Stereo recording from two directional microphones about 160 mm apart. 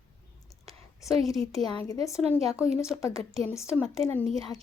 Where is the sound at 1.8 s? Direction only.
20° left (ahead or behind).